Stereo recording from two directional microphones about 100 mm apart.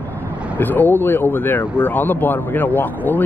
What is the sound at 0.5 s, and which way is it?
Speech, 20° left (ahead or behind).